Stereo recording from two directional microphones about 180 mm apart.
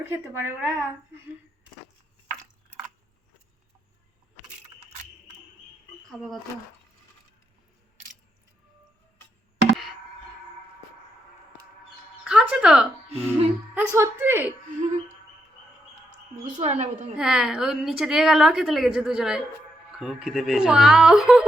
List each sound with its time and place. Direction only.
0.1 s a woman's voice: 10° right (ahead or behind)
6.1 s a woman's voice: centre (ahead or behind)
12.2 s a woman's voice: 5° right (ahead or behind)
14.8 s a woman's voice: 40° right (ahead or behind)
16.6 s a woman's voice: 40° right (ahead or behind)
17.2 s a woman's voice: 5° right (ahead or behind)